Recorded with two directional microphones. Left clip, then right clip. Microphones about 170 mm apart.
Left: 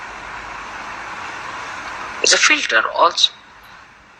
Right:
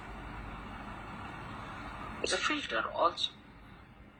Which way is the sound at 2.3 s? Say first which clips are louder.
Left 19 dB; 20° left (ahead or behind).